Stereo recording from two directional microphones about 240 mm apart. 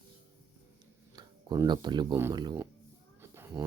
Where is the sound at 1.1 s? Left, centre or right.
Centre.